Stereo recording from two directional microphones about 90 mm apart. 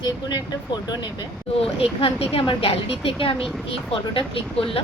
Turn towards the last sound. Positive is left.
turn(degrees=80)